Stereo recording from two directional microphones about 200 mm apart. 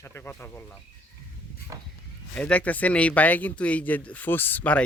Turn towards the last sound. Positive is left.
turn(degrees=5)  # may be behind; listen again after turning